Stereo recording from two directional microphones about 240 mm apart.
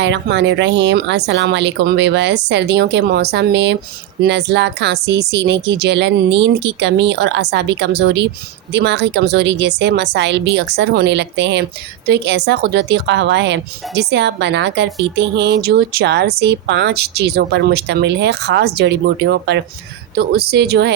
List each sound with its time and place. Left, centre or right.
0.0 s a woman's voice: right